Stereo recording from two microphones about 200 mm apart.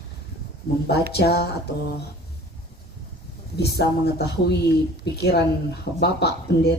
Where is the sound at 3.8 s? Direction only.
55° left (ahead or behind).